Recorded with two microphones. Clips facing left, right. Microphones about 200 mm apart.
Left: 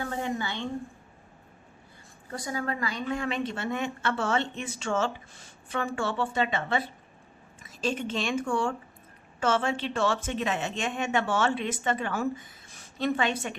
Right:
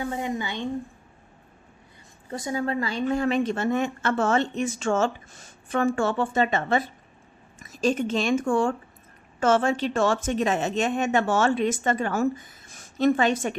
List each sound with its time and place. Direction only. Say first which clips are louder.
0.0 s a woman's voice: right 3 dB; 15° right (ahead or behind)
2.3 s a woman's voice: right 5 dB; 25° right (ahead or behind)
3.1 s speech: right 8 dB; 40° right (ahead or behind)